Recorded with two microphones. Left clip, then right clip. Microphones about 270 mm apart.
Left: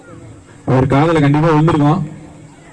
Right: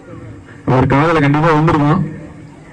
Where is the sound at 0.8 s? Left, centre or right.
Centre.